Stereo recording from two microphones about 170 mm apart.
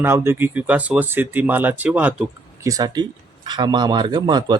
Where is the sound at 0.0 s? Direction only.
15° right (ahead or behind).